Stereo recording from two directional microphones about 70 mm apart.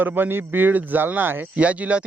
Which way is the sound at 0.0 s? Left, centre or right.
Right.